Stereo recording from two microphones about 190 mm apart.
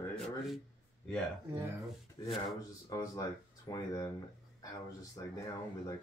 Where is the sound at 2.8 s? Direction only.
20° left (ahead or behind).